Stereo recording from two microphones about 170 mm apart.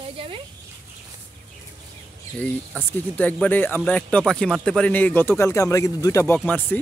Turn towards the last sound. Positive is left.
turn(degrees=10)  # may be behind; listen again after turning